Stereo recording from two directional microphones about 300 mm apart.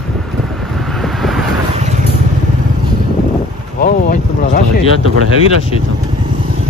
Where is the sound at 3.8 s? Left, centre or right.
Left.